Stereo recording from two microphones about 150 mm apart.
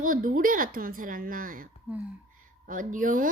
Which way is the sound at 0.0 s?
65° right (ahead or behind).